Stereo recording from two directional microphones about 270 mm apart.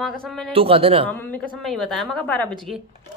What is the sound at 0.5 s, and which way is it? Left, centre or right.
Speech, right.